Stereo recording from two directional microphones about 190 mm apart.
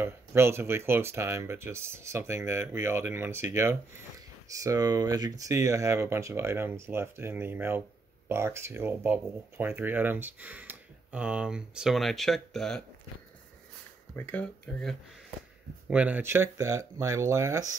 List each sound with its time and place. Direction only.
0.0 s speech: 10° right (ahead or behind)
14.1 s speech: 10° left (ahead or behind)
15.9 s speech: 5° right (ahead or behind)